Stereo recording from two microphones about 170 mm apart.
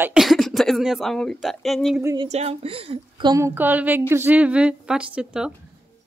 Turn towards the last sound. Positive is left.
turn(degrees=-5)  # may be behind; listen again after turning